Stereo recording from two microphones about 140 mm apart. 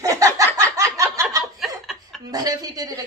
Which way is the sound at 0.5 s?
25° right (ahead or behind).